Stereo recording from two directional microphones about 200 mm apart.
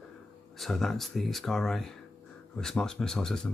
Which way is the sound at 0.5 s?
Centre (ahead or behind).